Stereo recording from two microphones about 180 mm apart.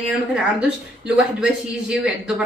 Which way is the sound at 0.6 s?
5° right (ahead or behind).